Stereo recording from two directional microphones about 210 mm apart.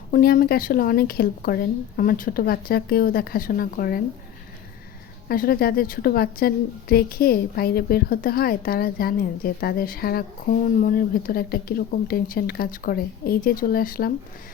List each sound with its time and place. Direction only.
0.1 s a woman's voice: 45° left (ahead or behind)
5.3 s a woman's voice: 45° left (ahead or behind)